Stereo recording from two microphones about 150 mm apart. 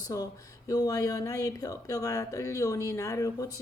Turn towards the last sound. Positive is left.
turn(degrees=20)  # may be behind; listen again after turning